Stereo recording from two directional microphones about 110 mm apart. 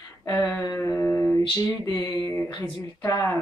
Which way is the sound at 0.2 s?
20° left (ahead or behind).